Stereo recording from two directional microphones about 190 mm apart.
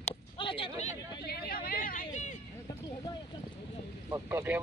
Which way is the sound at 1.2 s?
55° left (ahead or behind).